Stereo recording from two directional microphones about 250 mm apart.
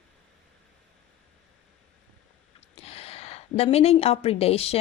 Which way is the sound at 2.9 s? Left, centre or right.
Left.